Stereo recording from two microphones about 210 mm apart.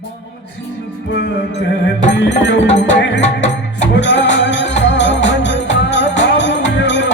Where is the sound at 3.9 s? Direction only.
55° left (ahead or behind).